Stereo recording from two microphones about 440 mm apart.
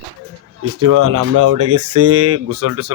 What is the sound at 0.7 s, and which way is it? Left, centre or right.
Speech, right.